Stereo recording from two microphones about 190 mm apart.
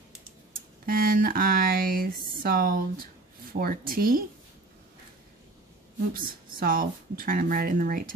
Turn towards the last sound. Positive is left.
turn(degrees=-45)  # may be behind; listen again after turning